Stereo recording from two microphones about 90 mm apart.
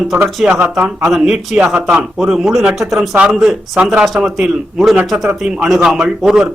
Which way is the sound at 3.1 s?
15° right (ahead or behind).